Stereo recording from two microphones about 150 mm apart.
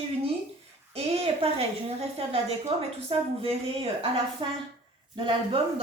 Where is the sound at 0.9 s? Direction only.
40° right (ahead or behind).